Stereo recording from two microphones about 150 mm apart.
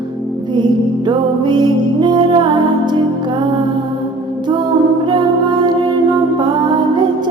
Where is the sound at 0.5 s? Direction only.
30° right (ahead or behind).